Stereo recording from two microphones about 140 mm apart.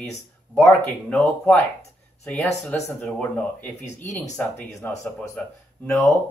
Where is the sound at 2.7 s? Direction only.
10° left (ahead or behind).